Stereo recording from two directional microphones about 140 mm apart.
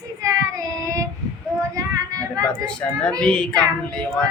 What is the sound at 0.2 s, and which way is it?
Child singing, 25° right (ahead or behind).